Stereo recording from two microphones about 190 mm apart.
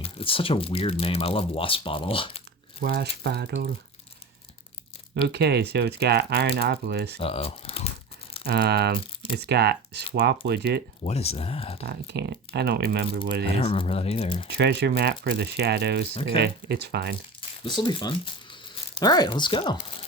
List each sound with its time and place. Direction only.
0.0 s speech: 30° left (ahead or behind)
2.8 s speech: 60° right (ahead or behind)
5.3 s speech: 60° right (ahead or behind)
7.2 s speech: 30° left (ahead or behind)
8.4 s speech: 60° right (ahead or behind)
11.0 s speech: 35° left (ahead or behind)
11.9 s speech: 60° right (ahead or behind)
13.6 s speech: 30° left (ahead or behind)
14.4 s speech: 60° right (ahead or behind)
17.6 s speech: 25° left (ahead or behind)